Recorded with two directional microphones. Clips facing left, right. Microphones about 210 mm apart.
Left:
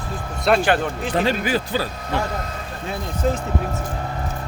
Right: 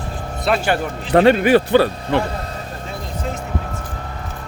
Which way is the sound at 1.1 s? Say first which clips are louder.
Right 10 dB; 65° right (ahead or behind).